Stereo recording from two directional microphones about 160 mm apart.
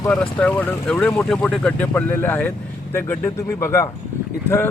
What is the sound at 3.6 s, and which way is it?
Speech, 20° left (ahead or behind).